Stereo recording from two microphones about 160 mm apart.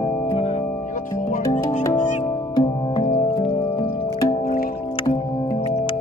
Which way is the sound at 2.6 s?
30° left (ahead or behind).